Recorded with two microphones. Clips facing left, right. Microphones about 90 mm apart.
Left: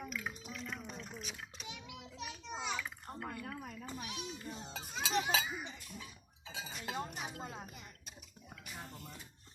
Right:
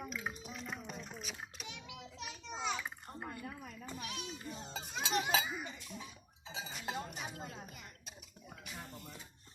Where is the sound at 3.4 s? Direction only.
45° left (ahead or behind).